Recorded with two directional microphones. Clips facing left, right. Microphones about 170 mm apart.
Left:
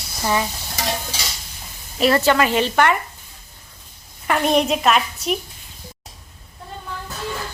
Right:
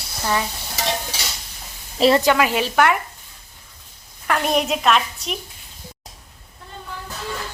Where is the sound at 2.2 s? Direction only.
10° right (ahead or behind).